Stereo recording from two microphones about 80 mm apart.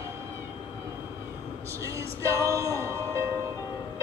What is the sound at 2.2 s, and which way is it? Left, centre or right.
Music, right.